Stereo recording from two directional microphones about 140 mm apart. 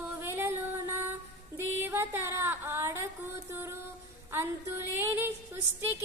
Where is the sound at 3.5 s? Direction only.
15° right (ahead or behind).